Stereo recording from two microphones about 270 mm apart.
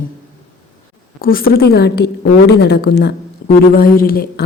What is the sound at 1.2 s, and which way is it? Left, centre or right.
A woman's voice, left.